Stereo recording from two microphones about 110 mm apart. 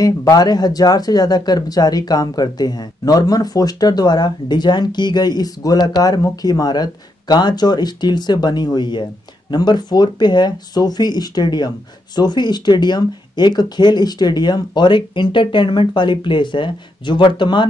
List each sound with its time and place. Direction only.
0.0 s speech: 35° left (ahead or behind)